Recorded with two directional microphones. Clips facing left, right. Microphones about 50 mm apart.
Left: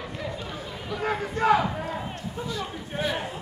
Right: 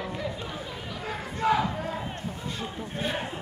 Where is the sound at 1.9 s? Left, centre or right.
Centre.